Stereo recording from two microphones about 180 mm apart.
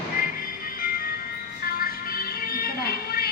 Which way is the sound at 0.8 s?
55° left (ahead or behind).